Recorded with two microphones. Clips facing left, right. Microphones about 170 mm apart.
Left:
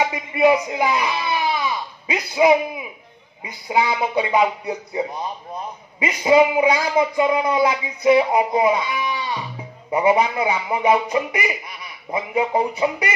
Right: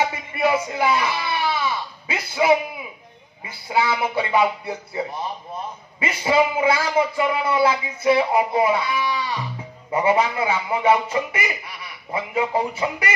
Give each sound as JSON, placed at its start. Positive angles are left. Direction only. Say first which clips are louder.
{"t": 0.0, "sound": "speech", "louder": "left 4 dB", "side_deg": 15}